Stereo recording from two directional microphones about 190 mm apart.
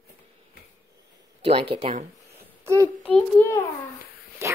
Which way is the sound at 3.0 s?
10° left (ahead or behind).